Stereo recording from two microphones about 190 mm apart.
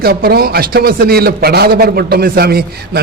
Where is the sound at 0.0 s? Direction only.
55° right (ahead or behind).